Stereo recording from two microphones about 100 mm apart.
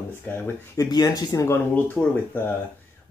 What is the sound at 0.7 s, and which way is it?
Speech, 40° left (ahead or behind).